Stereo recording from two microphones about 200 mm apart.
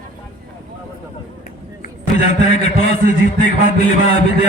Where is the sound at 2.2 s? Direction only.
35° left (ahead or behind).